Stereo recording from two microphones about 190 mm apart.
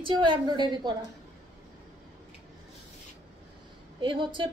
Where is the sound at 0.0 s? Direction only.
25° right (ahead or behind).